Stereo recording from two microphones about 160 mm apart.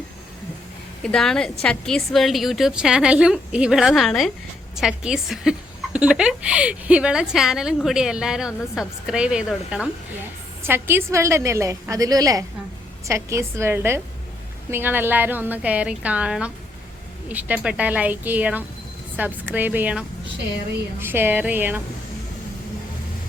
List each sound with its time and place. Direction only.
1.0 s a woman's voice: 5° left (ahead or behind)